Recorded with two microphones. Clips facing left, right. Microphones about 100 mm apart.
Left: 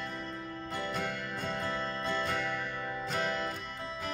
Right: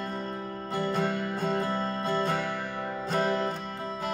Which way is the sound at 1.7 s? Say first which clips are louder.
Right 5 dB; 40° right (ahead or behind).